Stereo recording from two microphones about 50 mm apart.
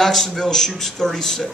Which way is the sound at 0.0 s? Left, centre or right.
Centre.